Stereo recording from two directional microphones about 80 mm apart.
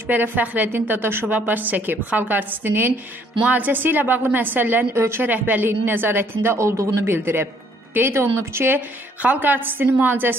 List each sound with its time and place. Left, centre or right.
0.0 s a woman's voice: right